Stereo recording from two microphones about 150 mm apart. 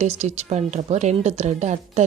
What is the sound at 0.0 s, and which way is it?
A woman's voice, 50° right (ahead or behind).